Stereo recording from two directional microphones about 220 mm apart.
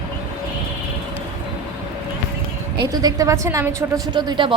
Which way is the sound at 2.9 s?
15° right (ahead or behind).